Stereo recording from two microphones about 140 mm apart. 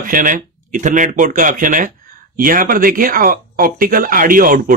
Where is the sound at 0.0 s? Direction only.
75° right (ahead or behind).